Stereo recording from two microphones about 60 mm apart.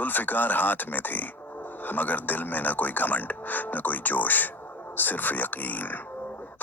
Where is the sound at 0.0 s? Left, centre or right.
Left.